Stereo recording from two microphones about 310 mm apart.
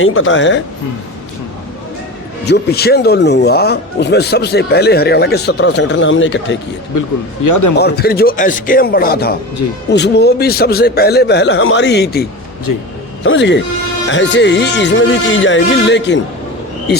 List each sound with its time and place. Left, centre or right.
0.0 s speech: left
2.5 s speech: left
6.9 s speech: left
7.8 s speech: left
12.7 s a man's voice: left
13.2 s speech: left